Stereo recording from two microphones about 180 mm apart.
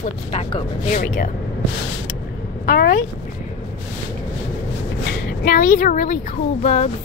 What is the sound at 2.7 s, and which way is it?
Speech, 55° left (ahead or behind).